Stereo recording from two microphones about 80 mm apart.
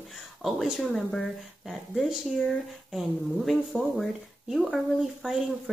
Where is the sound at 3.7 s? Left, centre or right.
Centre.